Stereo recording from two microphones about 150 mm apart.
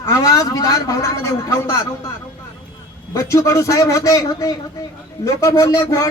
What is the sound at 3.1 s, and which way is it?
Speech, 20° left (ahead or behind).